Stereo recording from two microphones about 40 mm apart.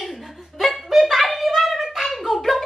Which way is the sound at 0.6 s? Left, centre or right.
Centre.